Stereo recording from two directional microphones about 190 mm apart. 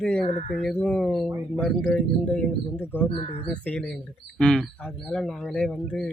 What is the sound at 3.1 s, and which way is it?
Speech, 30° left (ahead or behind).